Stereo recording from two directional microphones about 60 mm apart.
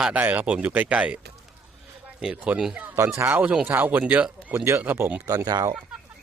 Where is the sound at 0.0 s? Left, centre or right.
Centre.